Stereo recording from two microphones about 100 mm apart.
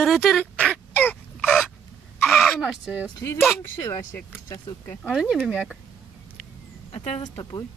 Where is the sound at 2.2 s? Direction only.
Centre (ahead or behind).